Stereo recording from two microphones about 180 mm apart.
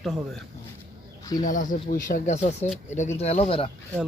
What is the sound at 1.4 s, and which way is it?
Speech, 45° left (ahead or behind).